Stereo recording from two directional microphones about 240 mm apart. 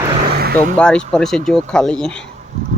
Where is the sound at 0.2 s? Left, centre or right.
Right.